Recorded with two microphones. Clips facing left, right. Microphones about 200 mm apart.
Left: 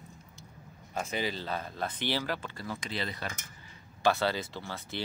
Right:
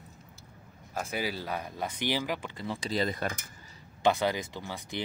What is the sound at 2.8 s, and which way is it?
Speech, 40° right (ahead or behind).